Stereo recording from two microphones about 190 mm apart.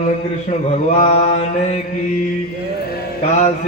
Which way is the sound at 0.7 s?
40° left (ahead or behind).